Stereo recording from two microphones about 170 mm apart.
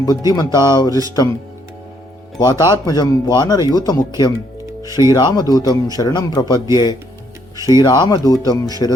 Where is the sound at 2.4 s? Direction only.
25° left (ahead or behind).